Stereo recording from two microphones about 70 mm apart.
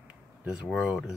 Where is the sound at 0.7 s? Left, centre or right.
Centre.